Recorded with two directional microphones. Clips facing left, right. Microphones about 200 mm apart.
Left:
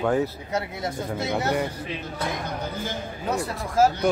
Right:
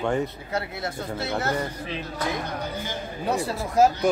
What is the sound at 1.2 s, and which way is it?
Speech, 15° left (ahead or behind).